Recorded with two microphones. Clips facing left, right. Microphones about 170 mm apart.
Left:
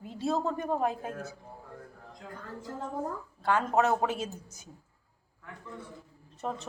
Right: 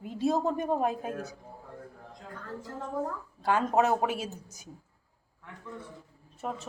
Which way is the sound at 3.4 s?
15° right (ahead or behind).